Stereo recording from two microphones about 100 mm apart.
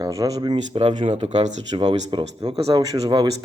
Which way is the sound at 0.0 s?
35° right (ahead or behind).